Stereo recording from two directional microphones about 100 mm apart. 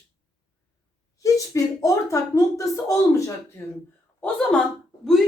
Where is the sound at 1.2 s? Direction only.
35° left (ahead or behind).